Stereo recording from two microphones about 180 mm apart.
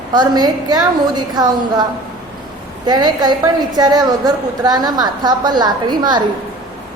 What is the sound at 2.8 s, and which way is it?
A woman's voice, 25° right (ahead or behind).